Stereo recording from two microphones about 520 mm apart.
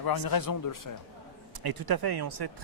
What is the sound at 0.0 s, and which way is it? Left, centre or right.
Speech, left.